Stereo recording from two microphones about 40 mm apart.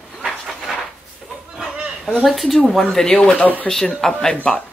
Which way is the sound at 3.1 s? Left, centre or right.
Left.